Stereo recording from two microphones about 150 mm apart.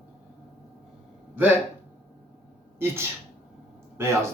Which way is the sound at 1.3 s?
15° right (ahead or behind).